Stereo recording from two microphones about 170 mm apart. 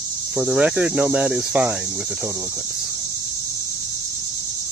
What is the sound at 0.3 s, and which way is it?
Speech, 5° right (ahead or behind).